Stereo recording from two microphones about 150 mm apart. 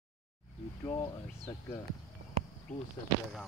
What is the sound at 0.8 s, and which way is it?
Speech, 30° left (ahead or behind).